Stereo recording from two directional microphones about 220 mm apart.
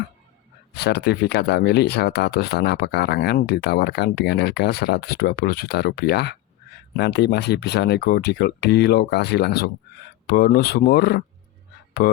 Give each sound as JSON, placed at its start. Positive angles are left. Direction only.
{"t": 0.7, "sound": "speech", "side_deg": 50}